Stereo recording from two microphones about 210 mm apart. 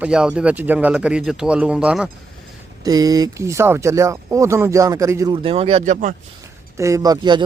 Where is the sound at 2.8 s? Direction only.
15° right (ahead or behind).